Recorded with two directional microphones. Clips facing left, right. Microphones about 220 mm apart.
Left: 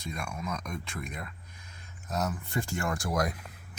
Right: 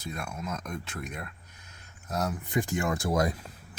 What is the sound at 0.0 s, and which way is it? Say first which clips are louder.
Speech: even; 5° right (ahead or behind).